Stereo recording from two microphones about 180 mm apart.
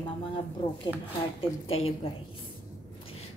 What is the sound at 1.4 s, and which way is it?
Speech, 35° left (ahead or behind).